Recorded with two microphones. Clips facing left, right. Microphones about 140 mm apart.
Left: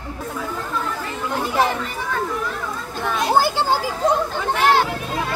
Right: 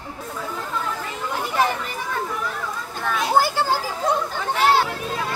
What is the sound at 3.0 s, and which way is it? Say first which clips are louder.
Children playing: left 1 dB; 15° left (ahead or behind).